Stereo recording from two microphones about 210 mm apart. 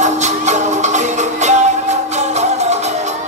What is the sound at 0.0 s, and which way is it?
Music, 35° right (ahead or behind).